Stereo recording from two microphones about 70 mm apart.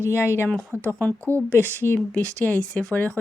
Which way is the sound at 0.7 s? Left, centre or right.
Right.